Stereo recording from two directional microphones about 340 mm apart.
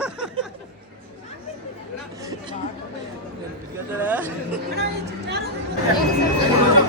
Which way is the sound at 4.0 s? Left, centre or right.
Centre.